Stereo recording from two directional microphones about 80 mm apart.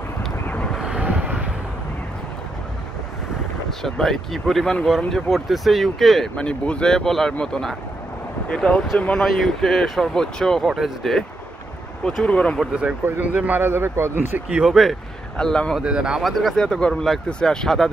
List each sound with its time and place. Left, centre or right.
0.5 s vehicle: centre
0.7 s vehicle: centre
3.8 s speech: centre
10.7 s speech: centre
12.2 s speech: centre
13.2 s a man's voice: centre
14.5 s speech: centre
15.3 s speech: centre
15.8 s speech: centre